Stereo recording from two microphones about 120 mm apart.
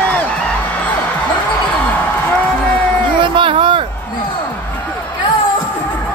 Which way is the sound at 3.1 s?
45° right (ahead or behind).